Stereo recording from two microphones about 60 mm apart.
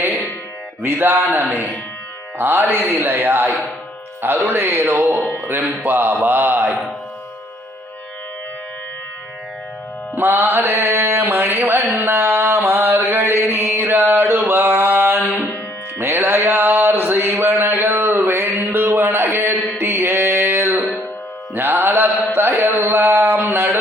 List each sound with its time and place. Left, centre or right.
0.8 s mantra: right
10.2 s mantra: right
11.6 s mantra: right
16.0 s music: right
17.3 s a sound: right
19.8 s mantra: right
21.5 s carnatic music: right
22.4 s a sound: right